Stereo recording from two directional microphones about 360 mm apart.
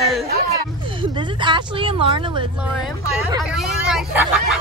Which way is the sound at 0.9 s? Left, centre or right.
Centre.